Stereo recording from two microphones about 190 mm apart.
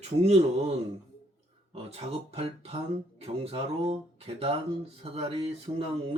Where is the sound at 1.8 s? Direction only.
30° right (ahead or behind).